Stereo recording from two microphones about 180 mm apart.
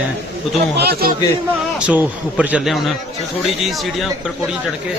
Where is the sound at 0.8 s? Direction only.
60° right (ahead or behind).